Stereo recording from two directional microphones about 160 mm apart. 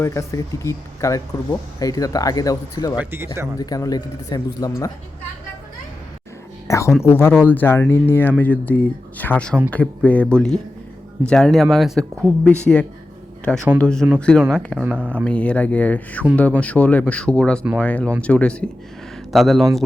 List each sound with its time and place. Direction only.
0.0 s speech: 20° left (ahead or behind)
3.0 s speech: 15° right (ahead or behind)
3.6 s speech: 25° left (ahead or behind)
6.7 s speech: 20° left (ahead or behind); by 19.6 s centre (ahead or behind)